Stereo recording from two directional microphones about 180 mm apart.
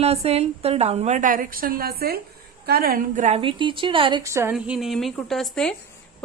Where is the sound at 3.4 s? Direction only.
25° right (ahead or behind).